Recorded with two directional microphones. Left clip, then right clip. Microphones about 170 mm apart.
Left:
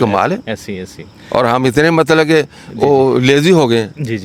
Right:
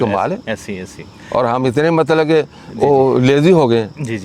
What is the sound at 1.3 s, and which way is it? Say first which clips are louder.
Speech: left 3 dB; 25° left (ahead or behind).